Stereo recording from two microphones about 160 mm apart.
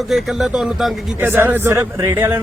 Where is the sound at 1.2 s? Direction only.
15° right (ahead or behind).